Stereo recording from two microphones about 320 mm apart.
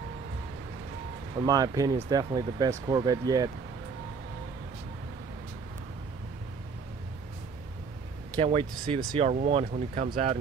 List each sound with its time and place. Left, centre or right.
1.4 s speech: centre
8.4 s speech: centre